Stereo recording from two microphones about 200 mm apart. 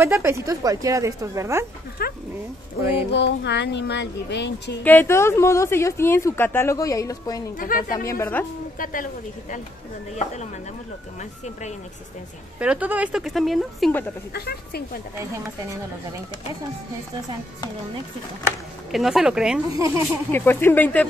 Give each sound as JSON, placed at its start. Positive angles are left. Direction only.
{"t": 0.0, "sound": "a woman's voice", "side_deg": -15}
{"t": 2.0, "sound": "a woman's voice", "side_deg": 50}
{"t": 2.8, "sound": "a woman's voice", "side_deg": -15}
{"t": 3.1, "sound": "speech", "side_deg": 60}
{"t": 4.8, "sound": "a woman's voice", "side_deg": 10}
{"t": 7.5, "sound": "a woman's voice", "side_deg": 45}
{"t": 8.1, "sound": "a woman's voice", "side_deg": 10}
{"t": 8.7, "sound": "a woman's voice", "side_deg": 45}
{"t": 12.5, "sound": "speech", "side_deg": -5}
{"t": 14.3, "sound": "a woman's voice", "side_deg": 50}
{"t": 18.9, "sound": "speech", "side_deg": 0}
{"t": 19.7, "sound": "a woman's voice", "side_deg": -15}
{"t": 20.2, "sound": "a woman's voice", "side_deg": 10}